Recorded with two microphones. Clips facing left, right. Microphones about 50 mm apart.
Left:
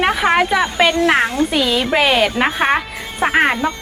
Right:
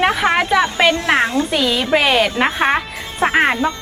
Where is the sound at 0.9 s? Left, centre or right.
Left.